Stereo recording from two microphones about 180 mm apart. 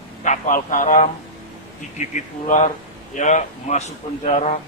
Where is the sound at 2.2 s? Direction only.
40° left (ahead or behind).